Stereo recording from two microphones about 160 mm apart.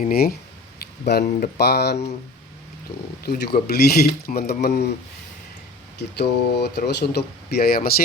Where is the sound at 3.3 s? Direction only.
80° left.